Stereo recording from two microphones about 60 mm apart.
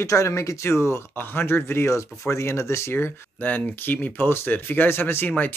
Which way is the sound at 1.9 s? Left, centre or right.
Left.